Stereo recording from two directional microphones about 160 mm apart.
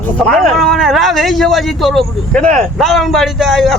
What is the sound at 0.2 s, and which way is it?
A man's voice, 5° left (ahead or behind).